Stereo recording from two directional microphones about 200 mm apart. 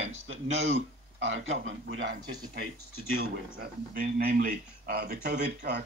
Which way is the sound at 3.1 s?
50° right (ahead or behind).